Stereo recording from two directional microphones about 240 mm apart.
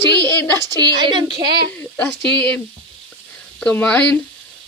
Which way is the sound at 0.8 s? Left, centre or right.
Centre.